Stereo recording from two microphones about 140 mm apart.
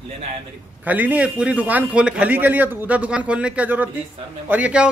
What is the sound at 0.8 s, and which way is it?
A man's voice, 10° right (ahead or behind).